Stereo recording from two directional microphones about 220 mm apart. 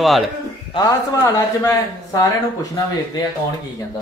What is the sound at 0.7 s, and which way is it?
A man's voice, 15° left (ahead or behind).